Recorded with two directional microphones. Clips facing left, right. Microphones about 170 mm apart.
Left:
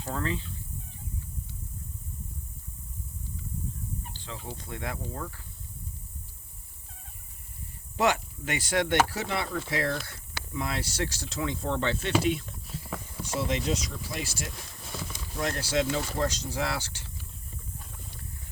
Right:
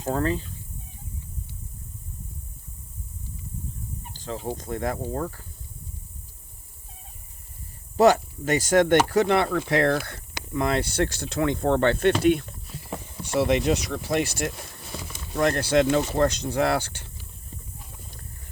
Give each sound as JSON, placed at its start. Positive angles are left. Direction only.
{"t": 0.0, "sound": "speech", "side_deg": -45}
{"t": 4.1, "sound": "speech", "side_deg": -40}
{"t": 7.9, "sound": "speech", "side_deg": -40}